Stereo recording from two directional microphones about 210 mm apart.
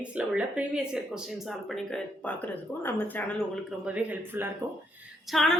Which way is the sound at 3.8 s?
5° right (ahead or behind).